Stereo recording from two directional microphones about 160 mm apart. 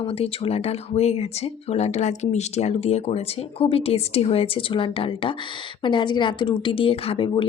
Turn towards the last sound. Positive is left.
turn(degrees=35)  # may be behind; listen again after turning